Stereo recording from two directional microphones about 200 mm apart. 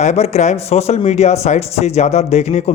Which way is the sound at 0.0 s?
35° left (ahead or behind).